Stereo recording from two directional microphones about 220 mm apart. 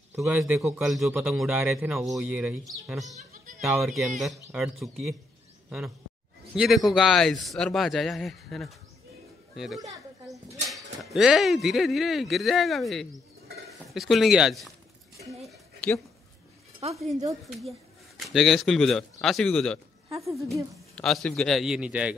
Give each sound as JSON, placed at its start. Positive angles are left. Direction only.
{"t": 0.1, "sound": "a man's voice", "side_deg": -5}
{"t": 3.2, "sound": "music", "side_deg": -35}
{"t": 3.6, "sound": "a man's voice", "side_deg": 0}
{"t": 6.5, "sound": "a man's voice", "side_deg": 0}
{"t": 9.8, "sound": "a sound", "side_deg": -15}
{"t": 10.7, "sound": "a man's voice", "side_deg": 0}
{"t": 15.4, "sound": "a sound", "side_deg": 5}
{"t": 17.5, "sound": "a man's voice", "side_deg": 0}